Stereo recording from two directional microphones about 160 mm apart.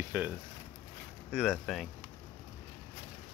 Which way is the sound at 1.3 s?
Centre (ahead or behind).